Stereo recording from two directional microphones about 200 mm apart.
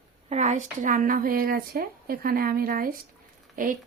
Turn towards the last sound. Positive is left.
turn(degrees=-45)  # may be behind; listen again after turning